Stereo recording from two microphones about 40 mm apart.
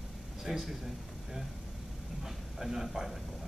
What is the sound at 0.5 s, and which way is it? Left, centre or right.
Speech, centre.